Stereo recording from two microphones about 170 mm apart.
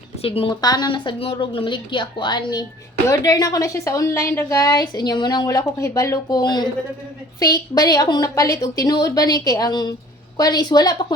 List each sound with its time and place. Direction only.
0.2 s a woman's voice: 35° left (ahead or behind)